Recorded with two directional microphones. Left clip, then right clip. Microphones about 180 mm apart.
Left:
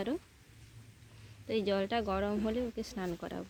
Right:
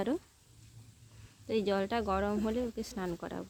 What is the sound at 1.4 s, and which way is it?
Speech, centre (ahead or behind).